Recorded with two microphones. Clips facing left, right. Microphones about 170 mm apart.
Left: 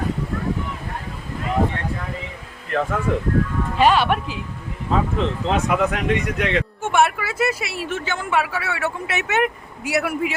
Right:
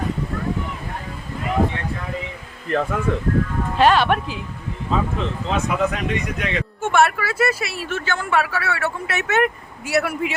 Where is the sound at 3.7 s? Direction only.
10° left (ahead or behind).